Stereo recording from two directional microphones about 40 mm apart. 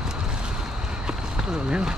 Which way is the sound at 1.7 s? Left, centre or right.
Centre.